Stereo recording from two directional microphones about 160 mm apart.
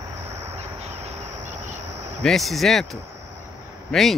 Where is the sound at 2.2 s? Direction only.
Centre (ahead or behind).